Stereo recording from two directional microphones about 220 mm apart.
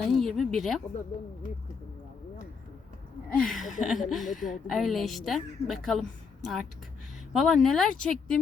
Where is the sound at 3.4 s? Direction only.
Centre (ahead or behind).